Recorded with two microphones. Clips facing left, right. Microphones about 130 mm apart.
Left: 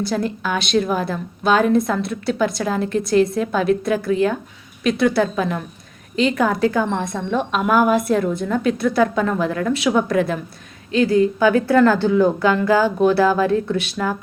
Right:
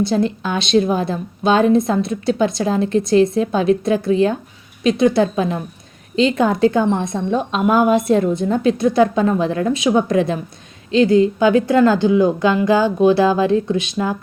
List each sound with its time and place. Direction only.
0.0 s a woman's voice: 25° right (ahead or behind)